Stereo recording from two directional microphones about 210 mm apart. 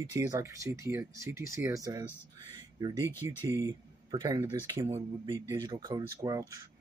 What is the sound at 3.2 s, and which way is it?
Speech, 15° right (ahead or behind).